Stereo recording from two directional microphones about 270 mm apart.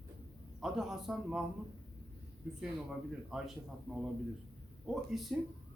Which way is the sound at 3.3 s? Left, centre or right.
Centre.